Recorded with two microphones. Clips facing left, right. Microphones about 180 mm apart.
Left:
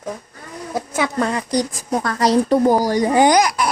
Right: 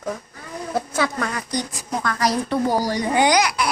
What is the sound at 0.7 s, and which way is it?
A woman's voice, 20° left (ahead or behind).